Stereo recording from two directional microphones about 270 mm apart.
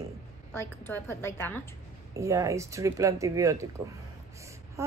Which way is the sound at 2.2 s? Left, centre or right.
Centre.